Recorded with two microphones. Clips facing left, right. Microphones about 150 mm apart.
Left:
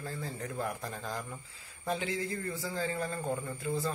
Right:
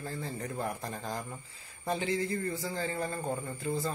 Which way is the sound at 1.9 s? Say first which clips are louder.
Right 3 dB; 5° left (ahead or behind).